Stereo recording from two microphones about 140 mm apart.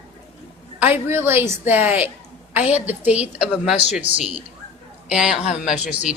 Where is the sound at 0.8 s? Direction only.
15° right (ahead or behind).